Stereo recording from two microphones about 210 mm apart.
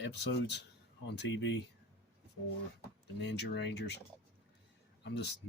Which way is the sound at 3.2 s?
55° left (ahead or behind).